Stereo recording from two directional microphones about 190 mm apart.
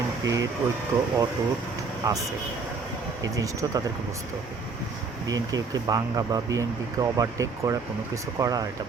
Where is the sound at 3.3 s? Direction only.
20° right (ahead or behind).